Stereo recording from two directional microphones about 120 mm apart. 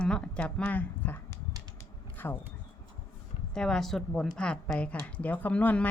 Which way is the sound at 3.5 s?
5° left (ahead or behind).